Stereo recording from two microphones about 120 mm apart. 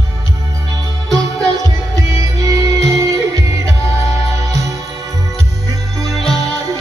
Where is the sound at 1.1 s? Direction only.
30° right (ahead or behind).